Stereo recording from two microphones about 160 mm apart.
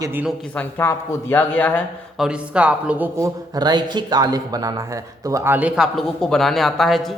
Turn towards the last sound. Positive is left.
turn(degrees=0)  # may be behind; listen again after turning